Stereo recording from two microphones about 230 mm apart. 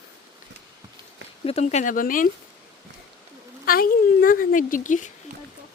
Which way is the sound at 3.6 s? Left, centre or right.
Left.